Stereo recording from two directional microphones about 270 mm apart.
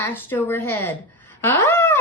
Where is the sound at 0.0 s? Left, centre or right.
Centre.